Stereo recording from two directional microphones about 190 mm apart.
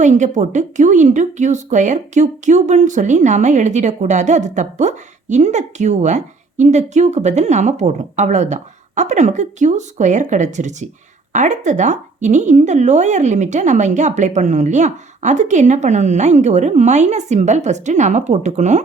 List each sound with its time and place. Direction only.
0.0 s a woman's voice: 40° right (ahead or behind)